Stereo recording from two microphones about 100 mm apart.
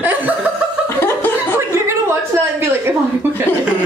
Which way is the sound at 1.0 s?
25° left (ahead or behind).